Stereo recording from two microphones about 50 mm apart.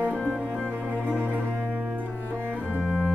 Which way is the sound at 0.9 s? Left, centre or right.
Right.